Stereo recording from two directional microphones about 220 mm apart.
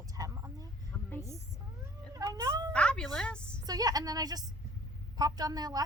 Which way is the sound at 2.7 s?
5° left (ahead or behind).